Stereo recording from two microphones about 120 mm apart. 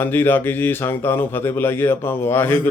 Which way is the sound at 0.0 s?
15° left (ahead or behind).